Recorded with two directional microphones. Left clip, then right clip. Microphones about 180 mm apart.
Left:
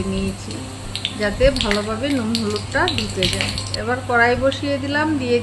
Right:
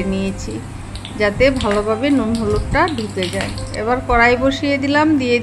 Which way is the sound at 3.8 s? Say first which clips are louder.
Right 3 dB; 30° right (ahead or behind).